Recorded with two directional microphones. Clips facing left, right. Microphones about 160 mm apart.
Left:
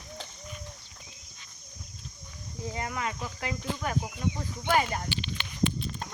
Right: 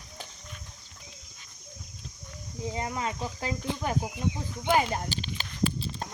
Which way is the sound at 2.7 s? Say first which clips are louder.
Right 2 dB; 25° right (ahead or behind).